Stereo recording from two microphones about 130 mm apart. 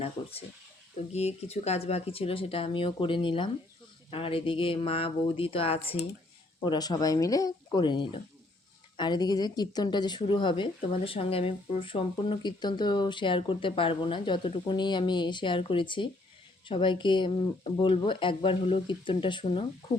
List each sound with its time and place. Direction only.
1.1 s speech: 55° left (ahead or behind)
6.7 s speech: 30° left (ahead or behind)